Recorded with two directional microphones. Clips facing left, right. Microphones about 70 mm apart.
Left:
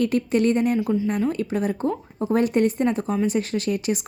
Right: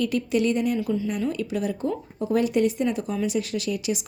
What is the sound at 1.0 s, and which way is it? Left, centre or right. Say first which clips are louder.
A woman's voice: left 3 dB; left.